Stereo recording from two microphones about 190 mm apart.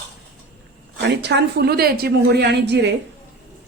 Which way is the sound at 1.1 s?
65° right (ahead or behind).